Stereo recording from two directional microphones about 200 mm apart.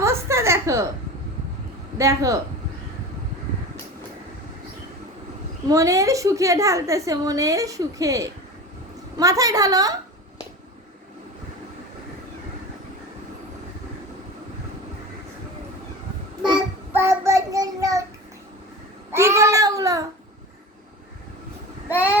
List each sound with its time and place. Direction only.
0.0 s a sound: 15° right (ahead or behind)
2.0 s a woman's voice: 15° right (ahead or behind)
5.6 s a woman's voice: 15° right (ahead or behind)
16.4 s child singing: 5° right (ahead or behind)
19.1 s child singing: 15° right (ahead or behind)
21.8 s vehicle: 10° right (ahead or behind)